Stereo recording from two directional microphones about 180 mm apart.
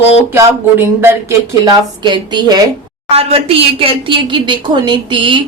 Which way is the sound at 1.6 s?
25° right (ahead or behind).